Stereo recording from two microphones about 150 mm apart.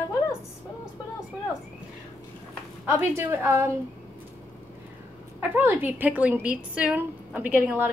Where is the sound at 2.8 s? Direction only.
15° right (ahead or behind).